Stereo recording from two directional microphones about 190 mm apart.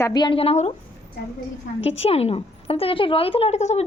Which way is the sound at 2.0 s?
30° left (ahead or behind).